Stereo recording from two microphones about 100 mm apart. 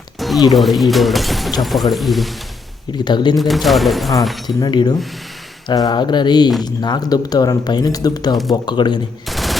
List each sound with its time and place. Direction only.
0.2 s music: centre (ahead or behind)
0.5 s speech: centre (ahead or behind)
3.0 s speech: 50° left (ahead or behind)
3.3 s speech: centre (ahead or behind)
4.4 s speech: 50° left (ahead or behind)
9.3 s machine gun: centre (ahead or behind)